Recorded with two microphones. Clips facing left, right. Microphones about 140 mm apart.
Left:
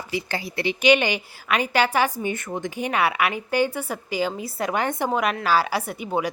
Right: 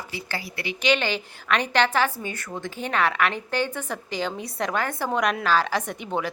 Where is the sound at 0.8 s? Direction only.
15° left (ahead or behind).